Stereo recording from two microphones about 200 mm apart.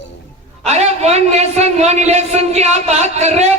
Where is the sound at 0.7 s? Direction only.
35° right (ahead or behind).